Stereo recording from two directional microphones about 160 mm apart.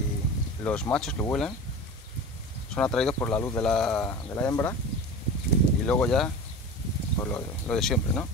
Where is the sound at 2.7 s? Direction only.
5° left (ahead or behind).